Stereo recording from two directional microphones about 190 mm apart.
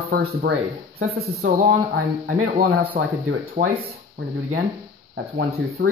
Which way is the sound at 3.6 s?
35° right (ahead or behind).